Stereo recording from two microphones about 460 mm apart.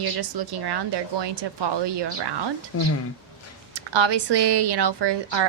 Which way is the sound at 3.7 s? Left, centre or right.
Right.